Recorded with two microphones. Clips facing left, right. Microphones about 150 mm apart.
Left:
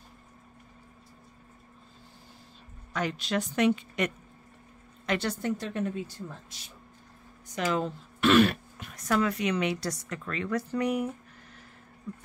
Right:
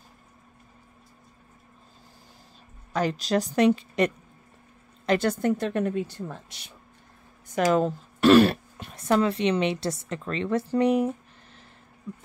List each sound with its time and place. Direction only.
2.9 s a woman's voice: 35° right (ahead or behind)
5.4 s a woman's voice: 55° right (ahead or behind)
7.4 s speech: 50° right (ahead or behind); by 11.6 s 30° right (ahead or behind)